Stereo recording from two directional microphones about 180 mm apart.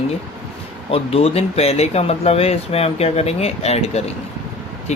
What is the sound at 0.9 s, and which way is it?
Speech, 30° left (ahead or behind).